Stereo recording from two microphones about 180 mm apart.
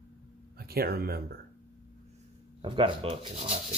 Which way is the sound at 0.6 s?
60° right (ahead or behind).